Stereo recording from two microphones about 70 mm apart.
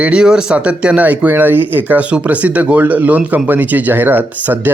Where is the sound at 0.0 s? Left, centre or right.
Centre.